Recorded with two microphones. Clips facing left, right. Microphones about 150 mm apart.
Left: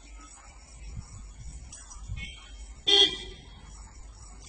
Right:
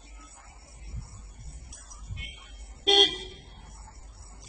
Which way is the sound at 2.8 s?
55° right (ahead or behind).